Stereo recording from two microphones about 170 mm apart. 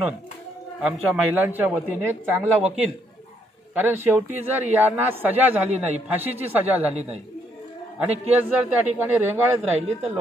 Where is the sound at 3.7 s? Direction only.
10° right (ahead or behind).